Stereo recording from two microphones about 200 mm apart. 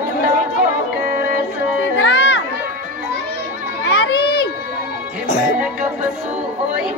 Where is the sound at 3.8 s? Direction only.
55° left (ahead or behind).